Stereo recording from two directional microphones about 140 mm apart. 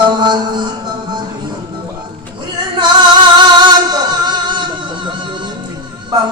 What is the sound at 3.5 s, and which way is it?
Music, 30° right (ahead or behind).